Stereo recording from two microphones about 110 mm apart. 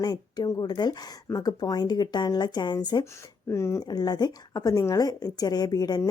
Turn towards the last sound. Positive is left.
turn(degrees=35)  # may be behind; listen again after turning